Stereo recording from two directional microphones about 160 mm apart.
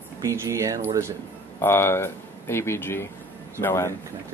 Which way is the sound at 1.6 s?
15° left (ahead or behind).